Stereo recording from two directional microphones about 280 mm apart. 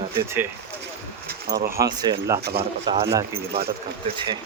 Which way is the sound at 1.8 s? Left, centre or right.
Centre.